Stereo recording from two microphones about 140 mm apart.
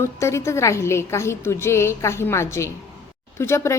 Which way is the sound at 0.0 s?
20° left (ahead or behind).